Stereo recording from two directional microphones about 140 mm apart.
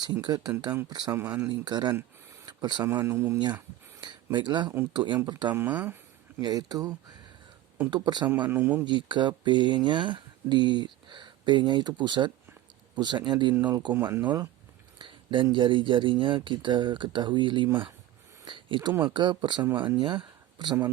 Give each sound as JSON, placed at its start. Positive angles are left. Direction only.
{"t": 0.0, "sound": "speech", "side_deg": -30}
{"t": 2.9, "sound": "speech", "side_deg": -20}
{"t": 4.0, "sound": "speech", "side_deg": -35}
{"t": 5.5, "sound": "speech", "side_deg": -15}
{"t": 6.4, "sound": "speech", "side_deg": -30}
{"t": 8.4, "sound": "speech", "side_deg": -15}
{"t": 8.8, "sound": "speech", "side_deg": -35}
{"t": 13.9, "sound": "speech", "side_deg": -15}
{"t": 14.9, "sound": "speech", "side_deg": -35}
{"t": 20.0, "sound": "a sound", "side_deg": -35}